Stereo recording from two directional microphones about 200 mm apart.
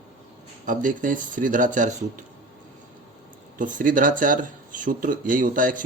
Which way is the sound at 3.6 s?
40° right (ahead or behind).